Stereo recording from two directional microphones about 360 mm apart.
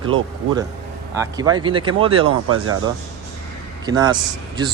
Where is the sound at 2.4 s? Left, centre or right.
Right.